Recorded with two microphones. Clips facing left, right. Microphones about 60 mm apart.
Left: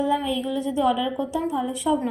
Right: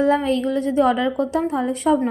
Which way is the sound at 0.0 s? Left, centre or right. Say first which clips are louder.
Right 5 dB; right.